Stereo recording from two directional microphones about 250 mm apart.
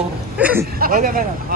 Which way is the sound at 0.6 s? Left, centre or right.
Right.